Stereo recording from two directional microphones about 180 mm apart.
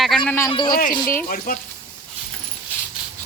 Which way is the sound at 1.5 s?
50° left (ahead or behind).